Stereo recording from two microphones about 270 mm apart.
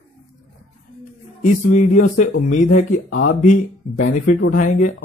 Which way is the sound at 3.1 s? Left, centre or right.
Left.